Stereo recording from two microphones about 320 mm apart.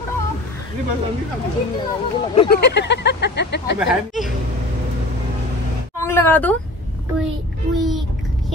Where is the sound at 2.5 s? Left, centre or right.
Left.